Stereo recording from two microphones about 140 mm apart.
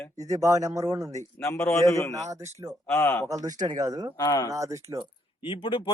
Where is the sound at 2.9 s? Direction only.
20° left (ahead or behind).